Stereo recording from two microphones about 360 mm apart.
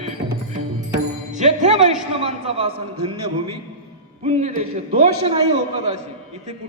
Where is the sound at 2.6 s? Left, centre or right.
Centre.